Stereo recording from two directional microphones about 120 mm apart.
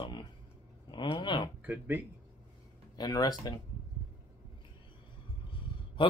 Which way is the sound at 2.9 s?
35° left (ahead or behind).